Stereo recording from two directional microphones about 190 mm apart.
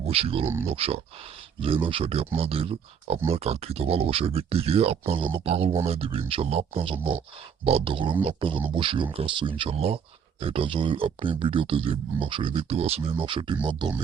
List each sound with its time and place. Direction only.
0.0 s speech: 30° right (ahead or behind)
0.4 s speech: 15° right (ahead or behind)
0.7 s speech: 30° right (ahead or behind)